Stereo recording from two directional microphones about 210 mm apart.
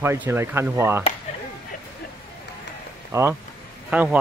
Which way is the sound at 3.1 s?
15° right (ahead or behind).